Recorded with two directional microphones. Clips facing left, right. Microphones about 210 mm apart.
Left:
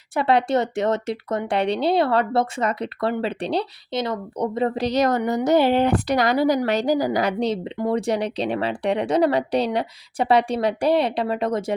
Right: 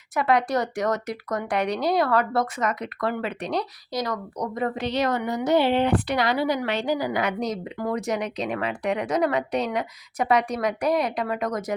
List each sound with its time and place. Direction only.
0.1 s speech: 30° left (ahead or behind)